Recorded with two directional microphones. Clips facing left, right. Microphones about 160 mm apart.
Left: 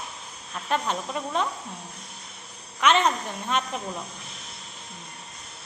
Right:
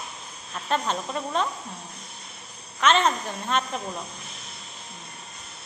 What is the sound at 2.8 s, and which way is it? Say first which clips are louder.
Speech: even; 15° left (ahead or behind).